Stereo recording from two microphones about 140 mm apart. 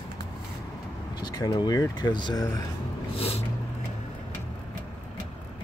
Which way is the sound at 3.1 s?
45° left (ahead or behind).